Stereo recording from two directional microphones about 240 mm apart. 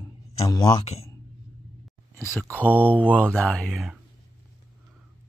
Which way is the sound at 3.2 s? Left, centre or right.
Centre.